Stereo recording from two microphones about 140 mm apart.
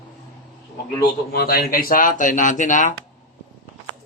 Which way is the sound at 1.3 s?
90° left.